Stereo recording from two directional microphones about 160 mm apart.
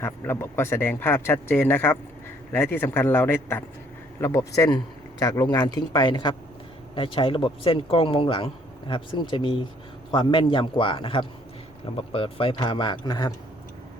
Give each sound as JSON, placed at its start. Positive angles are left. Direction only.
{"t": 0.0, "sound": "speech", "side_deg": 15}